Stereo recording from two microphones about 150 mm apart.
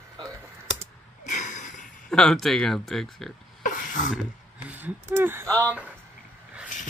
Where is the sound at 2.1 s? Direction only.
5° left (ahead or behind).